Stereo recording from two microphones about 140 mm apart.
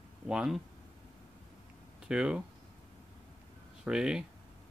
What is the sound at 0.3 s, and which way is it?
Speech, 5° right (ahead or behind).